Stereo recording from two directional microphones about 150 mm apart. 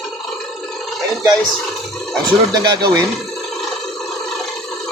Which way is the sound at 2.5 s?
25° right (ahead or behind).